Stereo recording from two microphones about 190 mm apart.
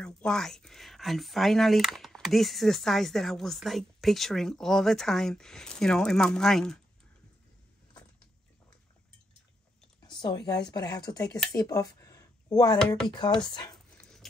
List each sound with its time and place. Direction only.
0.0 s speech: 5° left (ahead or behind)
10.2 s a woman's voice: 20° left (ahead or behind)
13.8 s dog: 5° left (ahead or behind)